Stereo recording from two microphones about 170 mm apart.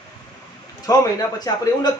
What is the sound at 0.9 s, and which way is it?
Speech, 20° left (ahead or behind).